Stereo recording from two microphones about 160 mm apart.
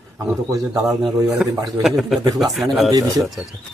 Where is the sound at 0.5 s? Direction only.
20° right (ahead or behind).